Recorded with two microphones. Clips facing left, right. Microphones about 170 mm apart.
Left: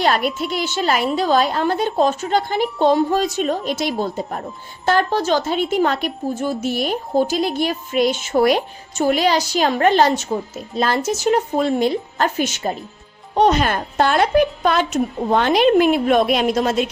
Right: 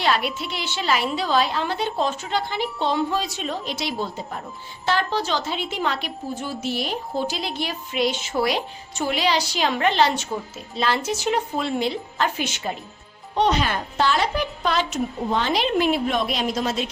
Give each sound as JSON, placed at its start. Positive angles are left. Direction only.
{"t": 0.0, "sound": "a woman's voice", "side_deg": 45}